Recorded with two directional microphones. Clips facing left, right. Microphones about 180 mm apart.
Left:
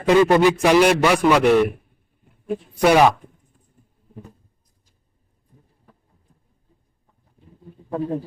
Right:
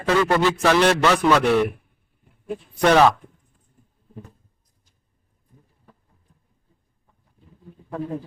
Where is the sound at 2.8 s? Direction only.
10° left (ahead or behind).